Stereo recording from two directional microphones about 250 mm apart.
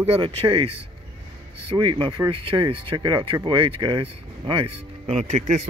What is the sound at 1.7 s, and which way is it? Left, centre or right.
Speech, centre.